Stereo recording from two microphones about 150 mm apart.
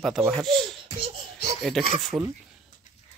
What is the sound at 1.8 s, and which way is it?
Speech, centre (ahead or behind).